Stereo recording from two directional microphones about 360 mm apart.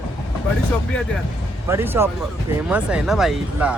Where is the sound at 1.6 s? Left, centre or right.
Centre.